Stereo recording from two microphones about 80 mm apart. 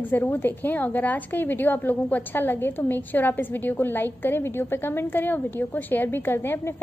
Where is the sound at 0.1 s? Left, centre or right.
Left.